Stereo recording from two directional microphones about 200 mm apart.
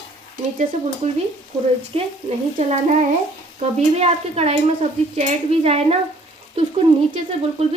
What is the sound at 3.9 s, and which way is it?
Stir, 30° right (ahead or behind).